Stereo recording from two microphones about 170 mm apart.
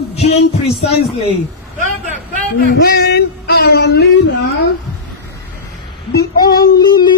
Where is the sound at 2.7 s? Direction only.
65° left (ahead or behind); by 4.2 s 85° left.